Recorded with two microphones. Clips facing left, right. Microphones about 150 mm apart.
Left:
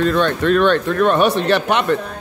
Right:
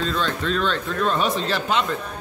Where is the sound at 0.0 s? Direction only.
65° left (ahead or behind).